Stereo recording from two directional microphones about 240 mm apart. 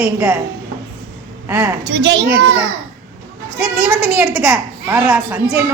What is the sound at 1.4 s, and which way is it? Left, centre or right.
Speech, centre.